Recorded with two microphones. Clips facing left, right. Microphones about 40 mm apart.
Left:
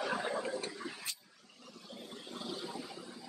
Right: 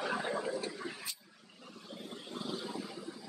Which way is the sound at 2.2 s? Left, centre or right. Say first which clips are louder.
Right 2 dB; centre.